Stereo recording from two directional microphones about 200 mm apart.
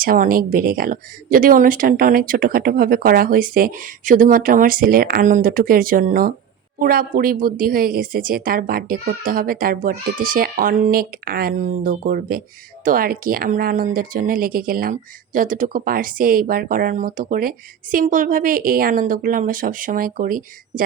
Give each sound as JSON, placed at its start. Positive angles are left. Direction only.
{"t": 0.0, "sound": "a woman's voice", "side_deg": -45}